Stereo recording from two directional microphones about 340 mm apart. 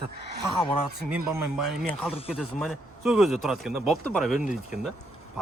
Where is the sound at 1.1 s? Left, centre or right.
Centre.